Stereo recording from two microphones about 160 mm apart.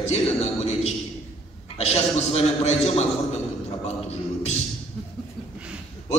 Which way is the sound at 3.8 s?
40° left (ahead or behind).